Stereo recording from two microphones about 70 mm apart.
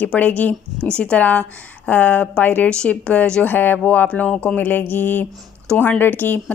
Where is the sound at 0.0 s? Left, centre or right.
Left.